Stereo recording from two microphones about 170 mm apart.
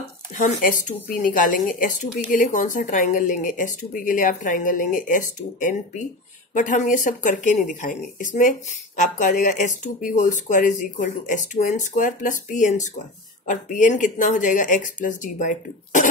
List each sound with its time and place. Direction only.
0.4 s speech: 50° left (ahead or behind)